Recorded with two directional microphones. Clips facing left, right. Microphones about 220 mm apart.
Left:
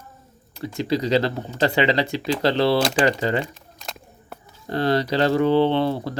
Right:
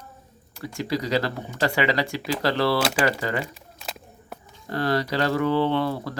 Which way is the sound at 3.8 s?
5° right (ahead or behind).